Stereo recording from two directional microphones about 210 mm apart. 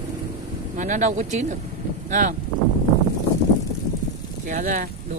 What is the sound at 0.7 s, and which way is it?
Speech, 35° right (ahead or behind).